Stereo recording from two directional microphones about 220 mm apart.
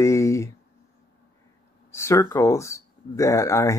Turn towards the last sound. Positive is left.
turn(degrees=15)  # may be behind; listen again after turning